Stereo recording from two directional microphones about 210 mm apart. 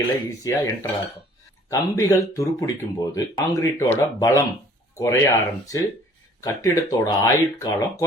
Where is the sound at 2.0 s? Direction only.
15° left (ahead or behind).